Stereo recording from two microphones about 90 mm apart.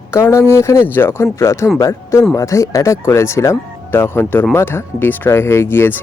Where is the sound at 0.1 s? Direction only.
30° left (ahead or behind).